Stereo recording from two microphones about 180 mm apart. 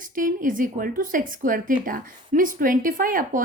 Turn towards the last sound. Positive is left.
turn(degrees=-50)  # may be behind; listen again after turning